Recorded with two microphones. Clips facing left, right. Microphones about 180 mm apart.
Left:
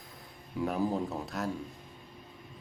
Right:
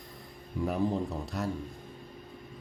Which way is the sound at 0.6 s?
Centre (ahead or behind).